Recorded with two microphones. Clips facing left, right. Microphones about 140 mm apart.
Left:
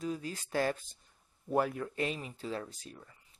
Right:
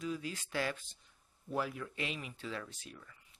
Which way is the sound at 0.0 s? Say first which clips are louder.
Left 2 dB; 40° left (ahead or behind).